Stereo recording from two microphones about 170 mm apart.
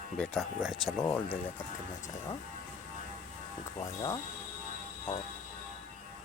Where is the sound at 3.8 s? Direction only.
20° left (ahead or behind).